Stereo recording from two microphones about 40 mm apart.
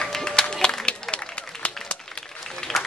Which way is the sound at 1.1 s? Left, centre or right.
Left.